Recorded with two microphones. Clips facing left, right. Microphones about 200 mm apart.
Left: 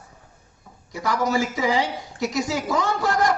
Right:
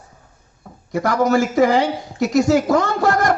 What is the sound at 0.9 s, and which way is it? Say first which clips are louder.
A man's voice: right 6 dB; 55° right (ahead or behind).